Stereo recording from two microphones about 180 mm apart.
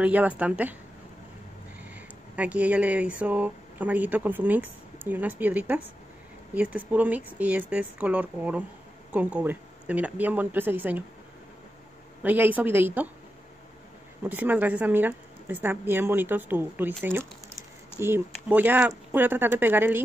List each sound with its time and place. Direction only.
0.0 s a woman's voice: 10° right (ahead or behind)
1.8 s a woman's voice: 10° right (ahead or behind)
12.2 s a woman's voice: 10° right (ahead or behind)
14.2 s a woman's voice: 10° right (ahead or behind)